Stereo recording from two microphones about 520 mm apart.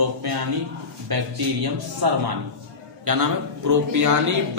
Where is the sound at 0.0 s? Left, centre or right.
Right.